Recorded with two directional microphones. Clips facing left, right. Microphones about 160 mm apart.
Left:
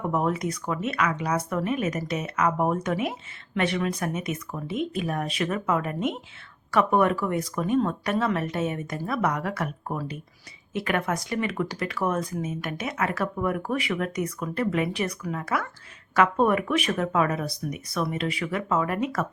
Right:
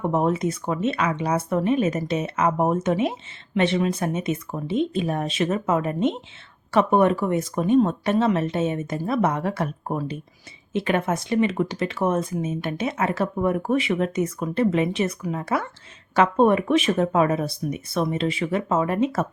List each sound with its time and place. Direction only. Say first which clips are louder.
0.0 s speech: right 4 dB; 25° right (ahead or behind)